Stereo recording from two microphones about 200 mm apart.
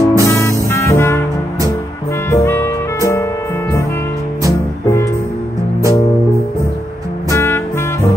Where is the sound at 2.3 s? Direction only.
15° left (ahead or behind).